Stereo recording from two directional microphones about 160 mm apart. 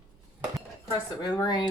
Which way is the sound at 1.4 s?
30° left (ahead or behind).